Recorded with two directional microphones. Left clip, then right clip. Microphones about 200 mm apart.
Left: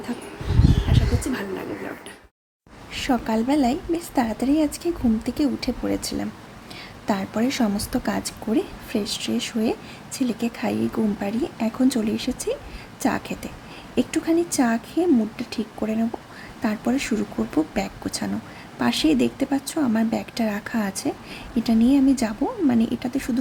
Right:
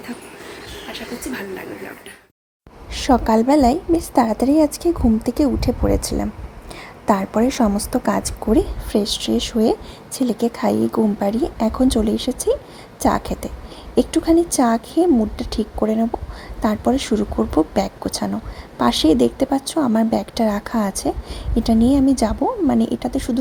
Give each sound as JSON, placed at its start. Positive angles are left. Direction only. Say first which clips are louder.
{"t": 1.3, "sound": "speech", "louder": "even", "side_deg": 10}
{"t": 2.9, "sound": "a woman's voice", "louder": "right 8 dB", "side_deg": -25}